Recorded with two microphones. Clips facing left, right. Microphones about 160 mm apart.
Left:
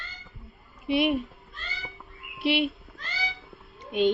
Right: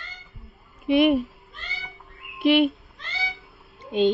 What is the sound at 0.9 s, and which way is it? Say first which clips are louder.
Speech: right 6 dB; 50° right (ahead or behind).